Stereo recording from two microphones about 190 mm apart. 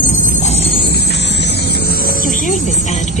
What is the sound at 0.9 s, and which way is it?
Music, 60° left (ahead or behind).